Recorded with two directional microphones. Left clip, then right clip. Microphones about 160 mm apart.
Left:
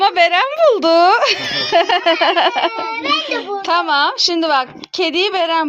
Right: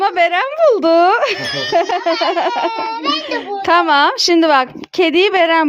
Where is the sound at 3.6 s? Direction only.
60° right (ahead or behind).